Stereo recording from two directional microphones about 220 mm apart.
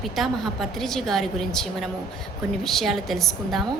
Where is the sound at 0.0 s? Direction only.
Centre (ahead or behind).